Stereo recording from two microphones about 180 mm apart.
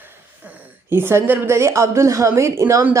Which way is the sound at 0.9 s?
10° right (ahead or behind).